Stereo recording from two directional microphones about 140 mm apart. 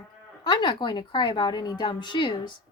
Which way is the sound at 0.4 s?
30° left (ahead or behind).